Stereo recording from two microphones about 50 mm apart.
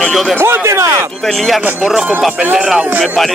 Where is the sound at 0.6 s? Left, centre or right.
Right.